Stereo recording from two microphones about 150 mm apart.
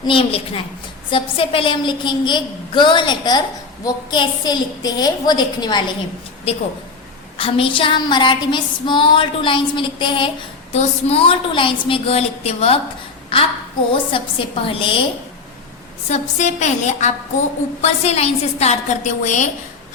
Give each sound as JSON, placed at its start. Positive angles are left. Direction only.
{"t": 0.0, "sound": "female singing", "side_deg": 35}
{"t": 3.8, "sound": "a woman's voice", "side_deg": 30}
{"t": 6.5, "sound": "female singing", "side_deg": 40}
{"t": 13.3, "sound": "a woman's voice", "side_deg": 35}
{"t": 13.9, "sound": "female singing", "side_deg": 35}
{"t": 16.0, "sound": "a woman's voice", "side_deg": 50}